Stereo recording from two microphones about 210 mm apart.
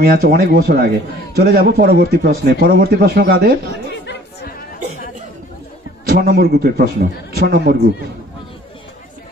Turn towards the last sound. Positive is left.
turn(degrees=-40)  # may be behind; listen again after turning